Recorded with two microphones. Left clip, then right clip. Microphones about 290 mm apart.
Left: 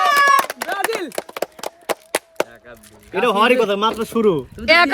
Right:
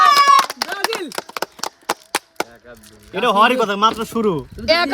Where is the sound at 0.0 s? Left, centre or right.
Centre.